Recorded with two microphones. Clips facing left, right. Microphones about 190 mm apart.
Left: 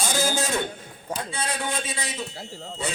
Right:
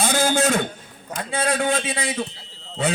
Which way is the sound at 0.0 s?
60° right (ahead or behind).